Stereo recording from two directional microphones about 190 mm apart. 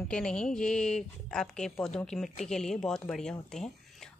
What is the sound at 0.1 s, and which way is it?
A woman's voice, 5° left (ahead or behind).